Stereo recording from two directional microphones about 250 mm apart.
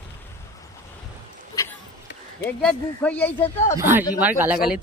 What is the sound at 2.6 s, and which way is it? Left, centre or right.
Speech, centre.